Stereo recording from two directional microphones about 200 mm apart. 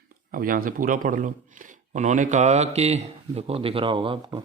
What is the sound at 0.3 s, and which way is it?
A man's voice, 45° right (ahead or behind).